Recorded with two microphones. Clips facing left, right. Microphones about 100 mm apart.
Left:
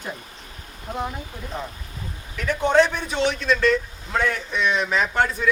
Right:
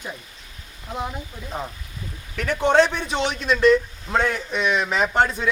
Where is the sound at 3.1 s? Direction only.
20° right (ahead or behind).